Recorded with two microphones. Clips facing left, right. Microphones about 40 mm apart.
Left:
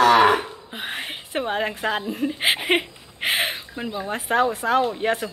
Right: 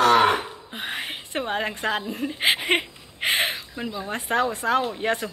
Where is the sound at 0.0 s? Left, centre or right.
Left.